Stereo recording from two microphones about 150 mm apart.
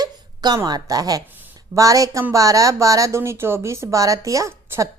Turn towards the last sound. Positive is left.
turn(degrees=-15)  # may be behind; listen again after turning